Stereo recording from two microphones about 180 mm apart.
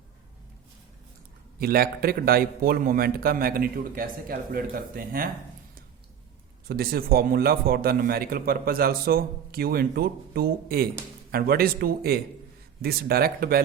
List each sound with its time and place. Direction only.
1.5 s a man's voice: 55° right (ahead or behind)
6.7 s a man's voice: 55° right (ahead or behind)